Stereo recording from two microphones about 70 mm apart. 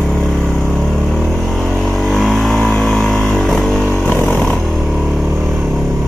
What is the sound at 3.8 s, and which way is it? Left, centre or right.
Vehicle, left.